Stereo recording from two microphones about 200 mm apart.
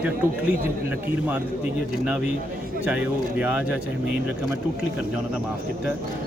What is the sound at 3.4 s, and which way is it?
Speech, 5° right (ahead or behind).